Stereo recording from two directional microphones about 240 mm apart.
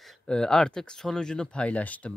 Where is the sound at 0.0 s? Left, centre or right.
Centre.